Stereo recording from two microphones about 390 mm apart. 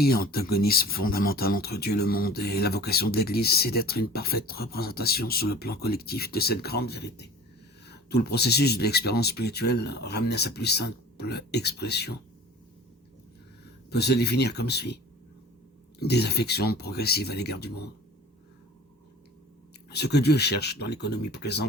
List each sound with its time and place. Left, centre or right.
0.0 s speech: left
13.9 s speech: left
16.0 s speech: left
19.9 s speech: left